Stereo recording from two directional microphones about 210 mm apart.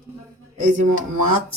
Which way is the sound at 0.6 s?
40° right (ahead or behind).